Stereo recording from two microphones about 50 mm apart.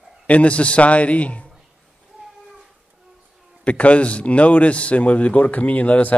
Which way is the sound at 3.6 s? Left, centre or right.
Left.